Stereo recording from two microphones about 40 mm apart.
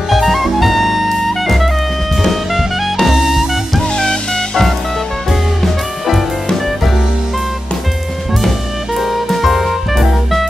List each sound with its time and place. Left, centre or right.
0.1 s jazz: centre
2.2 s music: centre
3.9 s music: centre
5.3 s music: centre
8.9 s music: centre